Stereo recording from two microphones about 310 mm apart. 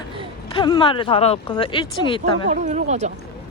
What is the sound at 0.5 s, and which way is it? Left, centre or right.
Speech, centre.